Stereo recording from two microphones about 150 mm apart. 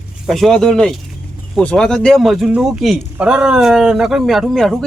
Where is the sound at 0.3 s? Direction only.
Centre (ahead or behind).